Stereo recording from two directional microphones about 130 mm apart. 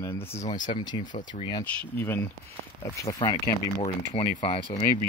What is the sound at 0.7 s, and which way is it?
Speech, 35° left (ahead or behind).